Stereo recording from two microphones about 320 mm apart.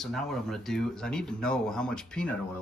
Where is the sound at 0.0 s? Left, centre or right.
Centre.